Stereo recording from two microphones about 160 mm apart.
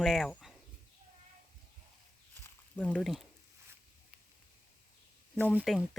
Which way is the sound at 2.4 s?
10° left (ahead or behind).